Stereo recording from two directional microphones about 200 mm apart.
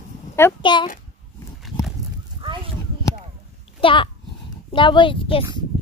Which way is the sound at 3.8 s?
25° left (ahead or behind).